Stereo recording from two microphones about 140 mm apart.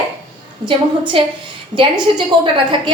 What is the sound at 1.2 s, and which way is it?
Speech, 40° right (ahead or behind).